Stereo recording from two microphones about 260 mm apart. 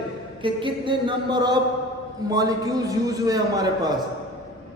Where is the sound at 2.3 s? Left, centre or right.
Centre.